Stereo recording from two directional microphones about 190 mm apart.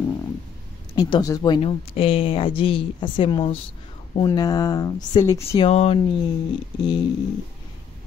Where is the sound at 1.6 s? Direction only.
30° left (ahead or behind).